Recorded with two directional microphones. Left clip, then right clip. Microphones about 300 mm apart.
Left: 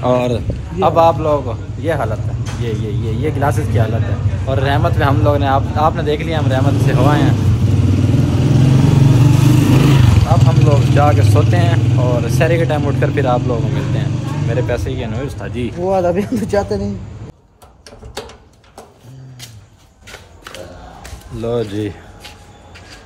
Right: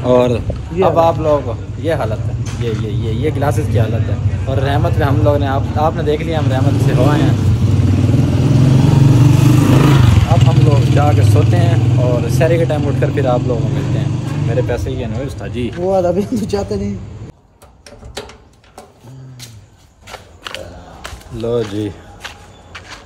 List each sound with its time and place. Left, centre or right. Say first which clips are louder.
0.0 s speech: right 3 dB; centre
21.3 s speech: right 1 dB; centre